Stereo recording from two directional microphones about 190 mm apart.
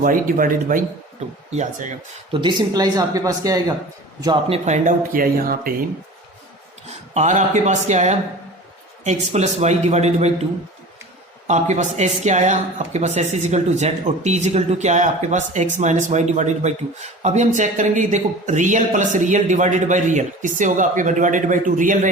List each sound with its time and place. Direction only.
0.0 s speech: 45° right (ahead or behind)
2.3 s speech: 25° right (ahead or behind); by 5.7 s 50° right (ahead or behind)
7.1 s speech: 35° right (ahead or behind)
11.4 s speech: 40° right (ahead or behind)